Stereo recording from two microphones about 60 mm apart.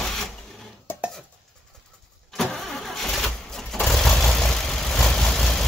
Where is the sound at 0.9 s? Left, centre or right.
Left.